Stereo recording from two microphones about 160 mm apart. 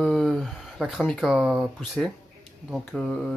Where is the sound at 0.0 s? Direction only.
Centre (ahead or behind).